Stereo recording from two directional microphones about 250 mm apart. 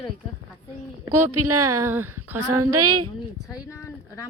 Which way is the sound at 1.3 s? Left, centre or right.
Right.